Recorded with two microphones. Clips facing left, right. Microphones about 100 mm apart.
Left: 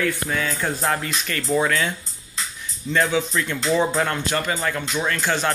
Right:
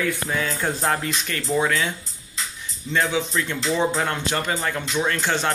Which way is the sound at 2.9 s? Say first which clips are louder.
Left 2 dB; 15° right (ahead or behind).